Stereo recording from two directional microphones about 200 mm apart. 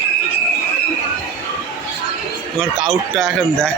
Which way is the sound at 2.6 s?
Centre (ahead or behind).